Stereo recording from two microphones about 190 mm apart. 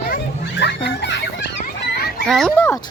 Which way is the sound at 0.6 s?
65° left (ahead or behind).